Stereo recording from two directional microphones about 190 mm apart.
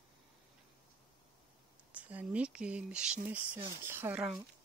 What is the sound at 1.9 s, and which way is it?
Speech, 10° right (ahead or behind).